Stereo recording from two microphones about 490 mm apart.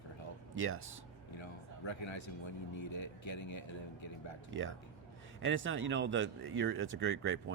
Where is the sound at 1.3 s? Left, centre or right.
Left.